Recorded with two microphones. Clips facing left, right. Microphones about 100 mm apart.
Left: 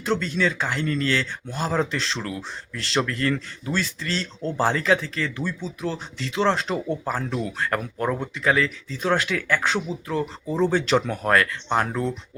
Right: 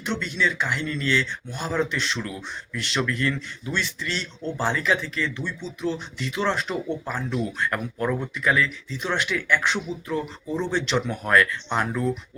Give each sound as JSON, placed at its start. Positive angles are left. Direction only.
{"t": 0.0, "sound": "speech", "side_deg": 40}